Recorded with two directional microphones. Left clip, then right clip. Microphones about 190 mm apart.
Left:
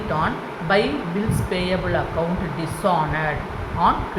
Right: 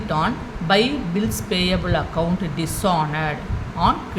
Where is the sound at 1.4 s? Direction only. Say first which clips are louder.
Right 2 dB; 25° right (ahead or behind).